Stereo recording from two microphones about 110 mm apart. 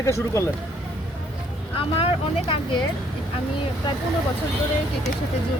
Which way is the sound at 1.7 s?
60° left (ahead or behind).